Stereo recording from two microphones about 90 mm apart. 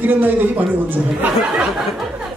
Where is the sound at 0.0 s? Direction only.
20° right (ahead or behind).